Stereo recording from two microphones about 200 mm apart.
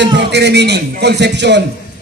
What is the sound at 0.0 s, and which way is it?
A man's voice, 60° right (ahead or behind).